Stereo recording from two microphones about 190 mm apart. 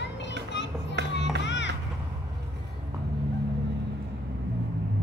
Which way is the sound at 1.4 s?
70° left (ahead or behind).